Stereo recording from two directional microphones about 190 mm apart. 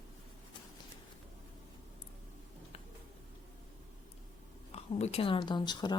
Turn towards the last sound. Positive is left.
turn(degrees=25)  # may be behind; listen again after turning